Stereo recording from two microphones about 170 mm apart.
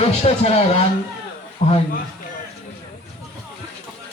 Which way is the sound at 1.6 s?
35° left (ahead or behind).